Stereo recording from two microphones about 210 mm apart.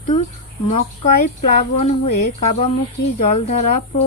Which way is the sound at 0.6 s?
35° left (ahead or behind).